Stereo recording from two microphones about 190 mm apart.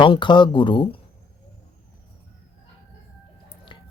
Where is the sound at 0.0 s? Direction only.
25° left (ahead or behind).